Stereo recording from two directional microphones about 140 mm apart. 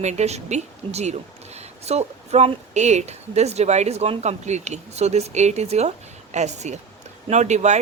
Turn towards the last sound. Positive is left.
turn(degrees=-55)  # may be behind; listen again after turning